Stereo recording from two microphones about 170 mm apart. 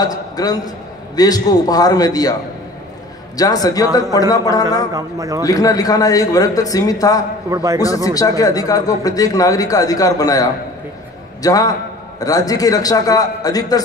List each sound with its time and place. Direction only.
0.0 s speech: 20° left (ahead or behind)
3.3 s speech: 20° left (ahead or behind)
4.9 s a man's voice: 20° right (ahead or behind)
5.4 s speech: 20° left (ahead or behind)
7.4 s a man's voice: 20° right (ahead or behind)
7.8 s speech: 20° left (ahead or behind)